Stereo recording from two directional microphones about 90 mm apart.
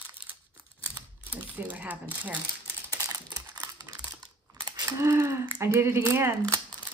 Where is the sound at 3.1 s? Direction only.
45° right (ahead or behind).